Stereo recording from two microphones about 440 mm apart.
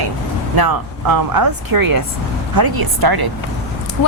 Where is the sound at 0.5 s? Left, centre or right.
Right.